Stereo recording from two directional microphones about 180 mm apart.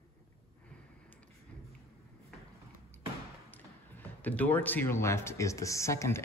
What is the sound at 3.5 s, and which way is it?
Speech, 10° left (ahead or behind).